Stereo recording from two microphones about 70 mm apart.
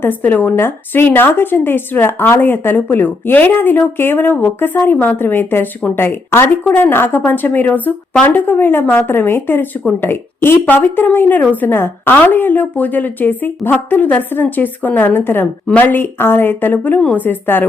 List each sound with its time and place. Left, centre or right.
0.0 s a woman's voice: left